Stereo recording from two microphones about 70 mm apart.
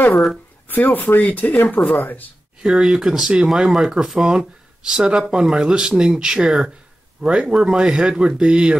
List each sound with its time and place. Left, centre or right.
0.7 s speech: left
2.6 s speech: centre